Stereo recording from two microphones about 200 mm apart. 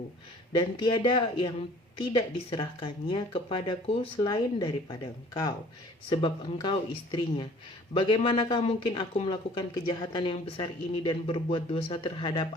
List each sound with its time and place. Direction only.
0.8 s speech: 25° left (ahead or behind)